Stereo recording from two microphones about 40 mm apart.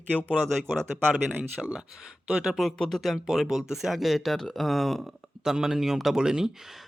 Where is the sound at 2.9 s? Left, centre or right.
Centre.